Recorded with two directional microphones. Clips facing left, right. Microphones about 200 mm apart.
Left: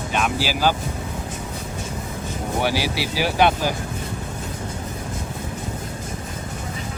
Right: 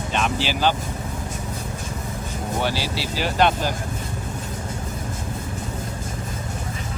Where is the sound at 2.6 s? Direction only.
10° left (ahead or behind).